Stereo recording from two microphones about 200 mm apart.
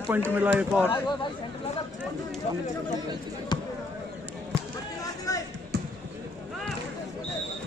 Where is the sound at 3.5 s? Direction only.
20° left (ahead or behind).